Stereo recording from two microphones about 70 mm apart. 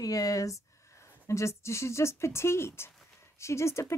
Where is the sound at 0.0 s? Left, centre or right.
Left.